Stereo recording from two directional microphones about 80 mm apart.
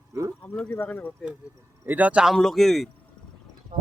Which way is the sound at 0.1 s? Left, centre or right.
Right.